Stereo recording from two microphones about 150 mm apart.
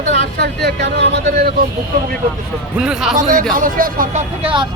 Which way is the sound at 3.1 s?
65° right (ahead or behind).